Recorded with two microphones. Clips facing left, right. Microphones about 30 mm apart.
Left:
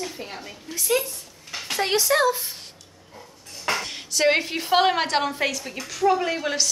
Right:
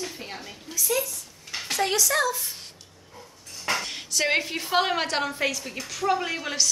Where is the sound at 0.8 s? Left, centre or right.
Left.